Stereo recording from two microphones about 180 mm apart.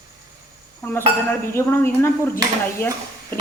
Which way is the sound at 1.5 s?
15° left (ahead or behind).